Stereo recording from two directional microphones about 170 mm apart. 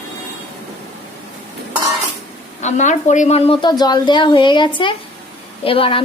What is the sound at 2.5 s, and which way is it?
A woman's voice, 45° left (ahead or behind).